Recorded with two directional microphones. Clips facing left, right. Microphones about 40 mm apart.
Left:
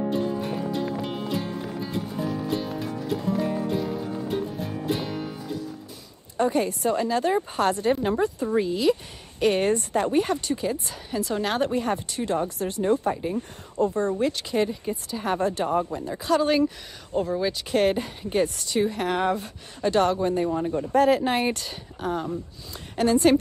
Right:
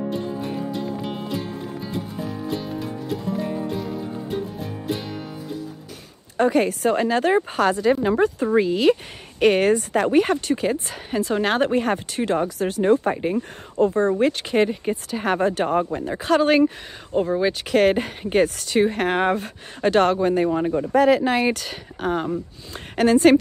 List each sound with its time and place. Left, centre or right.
0.1 s music: centre
6.3 s speech: right
8.2 s speech: right
9.4 s speech: right
12.9 s speech: right
13.7 s speech: right
17.1 s speech: right
17.6 s speech: right
20.2 s speech: right